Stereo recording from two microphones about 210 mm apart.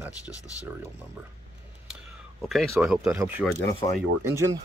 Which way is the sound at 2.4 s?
Centre (ahead or behind).